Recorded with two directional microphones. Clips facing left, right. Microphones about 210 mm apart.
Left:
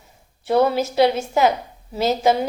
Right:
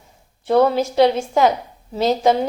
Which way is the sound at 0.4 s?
5° left (ahead or behind).